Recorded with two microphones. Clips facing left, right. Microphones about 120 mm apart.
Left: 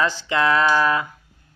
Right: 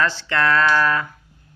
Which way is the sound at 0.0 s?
15° left (ahead or behind).